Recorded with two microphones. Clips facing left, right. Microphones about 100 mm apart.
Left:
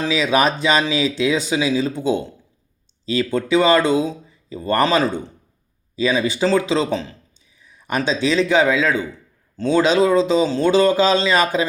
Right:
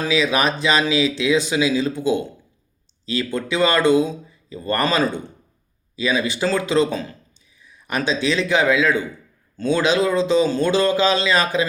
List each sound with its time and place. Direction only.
0.0 s speech: 25° left (ahead or behind)
3.2 s speech: 20° left (ahead or behind)